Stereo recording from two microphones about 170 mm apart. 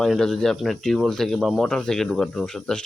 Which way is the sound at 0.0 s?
5° left (ahead or behind).